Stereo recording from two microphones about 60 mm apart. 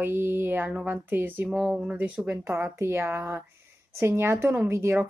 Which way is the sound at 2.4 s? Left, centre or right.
Right.